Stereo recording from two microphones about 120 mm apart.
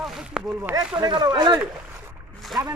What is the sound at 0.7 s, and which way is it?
Speech, 10° right (ahead or behind).